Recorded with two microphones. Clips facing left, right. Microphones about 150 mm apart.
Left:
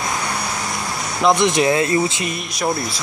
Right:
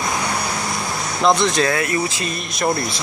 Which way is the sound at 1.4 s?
20° left (ahead or behind).